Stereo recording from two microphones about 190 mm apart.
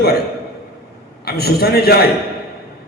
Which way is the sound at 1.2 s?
55° left (ahead or behind).